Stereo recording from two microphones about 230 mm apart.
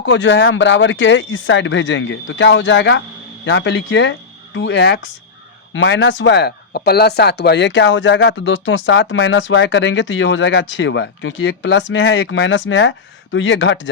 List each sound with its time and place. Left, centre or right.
0.0 s speech: left